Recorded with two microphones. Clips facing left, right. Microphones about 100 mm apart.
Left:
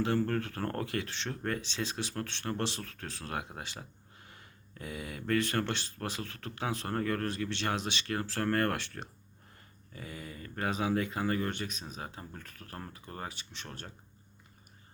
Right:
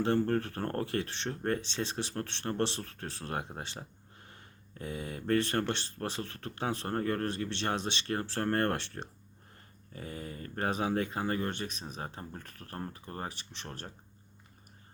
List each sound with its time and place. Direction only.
0.0 s speech: 30° right (ahead or behind)